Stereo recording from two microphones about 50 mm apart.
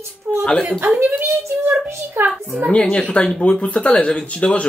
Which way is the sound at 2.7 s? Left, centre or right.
Centre.